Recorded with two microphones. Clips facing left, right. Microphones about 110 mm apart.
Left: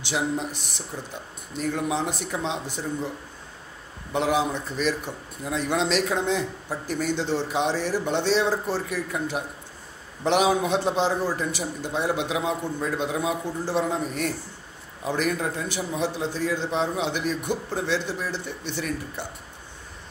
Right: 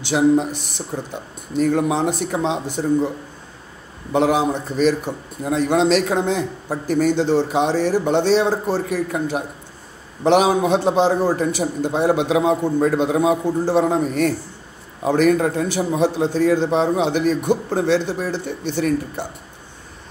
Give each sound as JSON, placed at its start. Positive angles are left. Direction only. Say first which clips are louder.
{"t": 0.1, "sound": "a man's voice", "louder": "right 11 dB", "side_deg": -50}
{"t": 4.1, "sound": "a man's voice", "louder": "right 6 dB", "side_deg": -40}
{"t": 15.8, "sound": "a man's voice", "louder": "right 8 dB", "side_deg": -45}